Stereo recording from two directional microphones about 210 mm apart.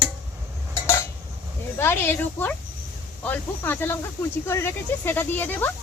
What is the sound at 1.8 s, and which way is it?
Speech, 10° left (ahead or behind).